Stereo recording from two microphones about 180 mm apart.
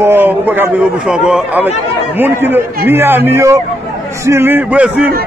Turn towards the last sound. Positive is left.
turn(degrees=-5)  # may be behind; listen again after turning